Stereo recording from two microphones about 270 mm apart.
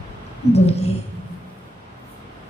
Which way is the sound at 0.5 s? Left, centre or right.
Left.